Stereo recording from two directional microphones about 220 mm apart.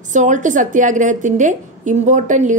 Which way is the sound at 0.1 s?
35° right (ahead or behind).